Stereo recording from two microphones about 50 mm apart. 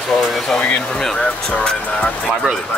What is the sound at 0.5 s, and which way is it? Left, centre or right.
Speech, left.